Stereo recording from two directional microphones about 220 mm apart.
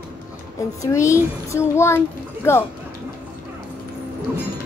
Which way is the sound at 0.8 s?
15° left (ahead or behind).